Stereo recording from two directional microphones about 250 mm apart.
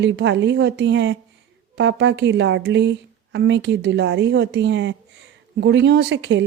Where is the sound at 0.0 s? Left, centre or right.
Right.